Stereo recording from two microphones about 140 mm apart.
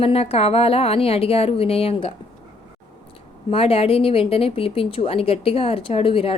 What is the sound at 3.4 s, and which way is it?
A woman's voice, 45° left (ahead or behind).